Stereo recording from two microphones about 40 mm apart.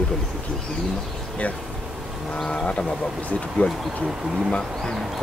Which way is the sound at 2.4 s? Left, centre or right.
Left.